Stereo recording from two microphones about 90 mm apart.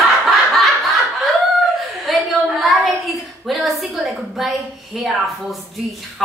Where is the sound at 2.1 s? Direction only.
Centre (ahead or behind).